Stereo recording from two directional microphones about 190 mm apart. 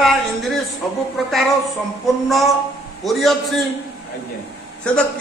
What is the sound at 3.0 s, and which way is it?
Speech, centre (ahead or behind).